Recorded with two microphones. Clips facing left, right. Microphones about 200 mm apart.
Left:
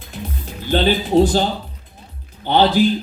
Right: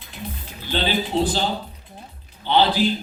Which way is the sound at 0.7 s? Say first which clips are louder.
Left 7 dB; 45° left (ahead or behind).